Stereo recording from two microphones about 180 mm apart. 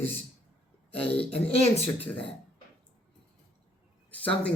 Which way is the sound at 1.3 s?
35° left (ahead or behind).